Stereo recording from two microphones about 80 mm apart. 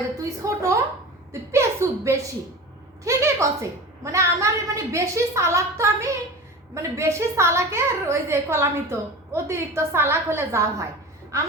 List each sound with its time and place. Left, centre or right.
0.2 s a woman's voice: right
1.3 s chuckle: right
3.0 s a woman's voice: right